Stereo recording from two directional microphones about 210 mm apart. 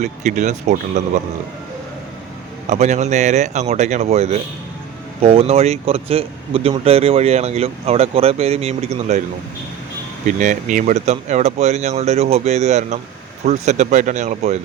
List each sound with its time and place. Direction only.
0.0 s speech: 35° right (ahead or behind)
2.6 s speech: 35° right (ahead or behind)
10.2 s speech: 35° right (ahead or behind)